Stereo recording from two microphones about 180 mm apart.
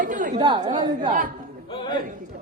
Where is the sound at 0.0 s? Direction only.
45° right (ahead or behind).